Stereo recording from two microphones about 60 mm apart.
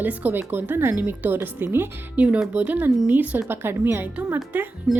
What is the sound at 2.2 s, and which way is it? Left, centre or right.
A woman's voice, right.